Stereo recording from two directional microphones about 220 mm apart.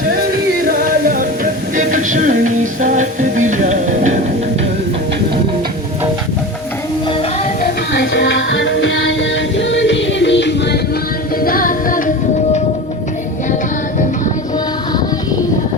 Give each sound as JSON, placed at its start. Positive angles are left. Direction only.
{"t": 0.7, "sound": "music", "side_deg": -40}
{"t": 7.6, "sound": "music", "side_deg": 55}
{"t": 11.3, "sound": "music", "side_deg": 40}